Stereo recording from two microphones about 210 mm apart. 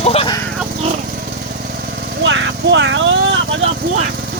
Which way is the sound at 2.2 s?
60° right (ahead or behind).